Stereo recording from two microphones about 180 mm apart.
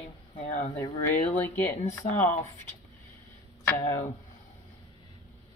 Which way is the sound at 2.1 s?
45° left (ahead or behind).